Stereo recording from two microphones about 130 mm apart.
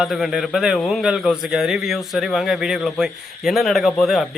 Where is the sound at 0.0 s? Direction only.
5° right (ahead or behind).